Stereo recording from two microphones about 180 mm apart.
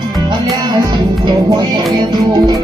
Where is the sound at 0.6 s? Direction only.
20° right (ahead or behind).